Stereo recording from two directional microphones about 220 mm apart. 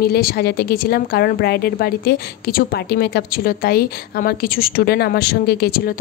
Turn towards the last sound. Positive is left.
turn(degrees=45)  # may be behind; listen again after turning